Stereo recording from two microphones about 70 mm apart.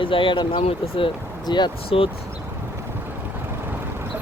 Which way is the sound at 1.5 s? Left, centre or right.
Left.